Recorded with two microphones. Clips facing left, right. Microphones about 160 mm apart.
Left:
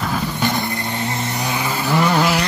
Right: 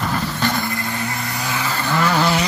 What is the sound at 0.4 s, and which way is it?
Vehicle, 20° left (ahead or behind).